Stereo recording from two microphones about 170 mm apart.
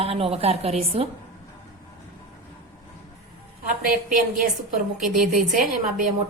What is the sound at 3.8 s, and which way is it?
A woman's voice, 55° right (ahead or behind).